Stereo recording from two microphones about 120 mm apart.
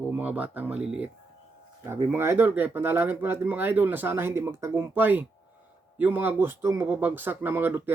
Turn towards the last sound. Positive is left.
turn(degrees=-15)  # may be behind; listen again after turning